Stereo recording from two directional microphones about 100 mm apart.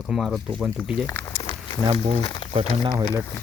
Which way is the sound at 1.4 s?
65° left (ahead or behind).